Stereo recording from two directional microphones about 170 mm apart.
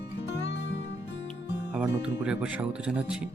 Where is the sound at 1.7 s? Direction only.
5° right (ahead or behind).